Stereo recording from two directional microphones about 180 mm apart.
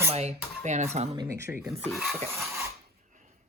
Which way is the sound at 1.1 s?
20° right (ahead or behind).